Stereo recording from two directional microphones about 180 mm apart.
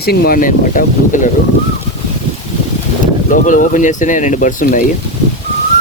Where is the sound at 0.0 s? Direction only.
60° left (ahead or behind).